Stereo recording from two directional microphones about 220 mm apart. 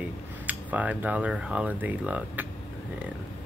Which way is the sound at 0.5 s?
5° right (ahead or behind).